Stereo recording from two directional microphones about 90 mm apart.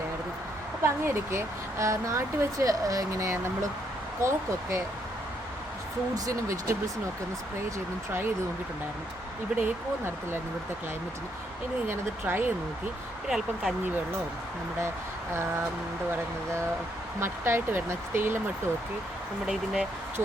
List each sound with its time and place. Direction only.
0.8 s speech: 30° right (ahead or behind)
6.1 s speech: 40° right (ahead or behind)
9.5 s speech: 10° right (ahead or behind)
11.9 s speech: 25° right (ahead or behind)
13.2 s speech: 5° right (ahead or behind)
17.2 s speech: 25° right (ahead or behind)
19.5 s speech: 5° right (ahead or behind)